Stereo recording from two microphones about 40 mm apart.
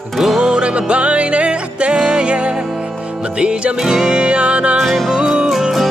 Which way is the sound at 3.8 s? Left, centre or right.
Centre.